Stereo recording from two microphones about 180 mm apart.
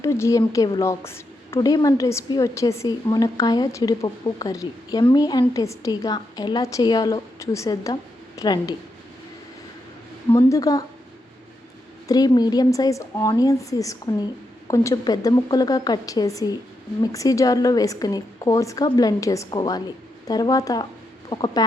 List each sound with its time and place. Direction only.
0.0 s a woman's voice: 15° left (ahead or behind)
10.3 s a woman's voice: 20° left (ahead or behind)
12.0 s a woman's voice: 20° left (ahead or behind)